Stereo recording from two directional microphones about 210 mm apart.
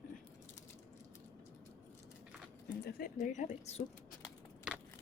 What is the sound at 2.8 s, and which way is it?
Speech, 50° left (ahead or behind).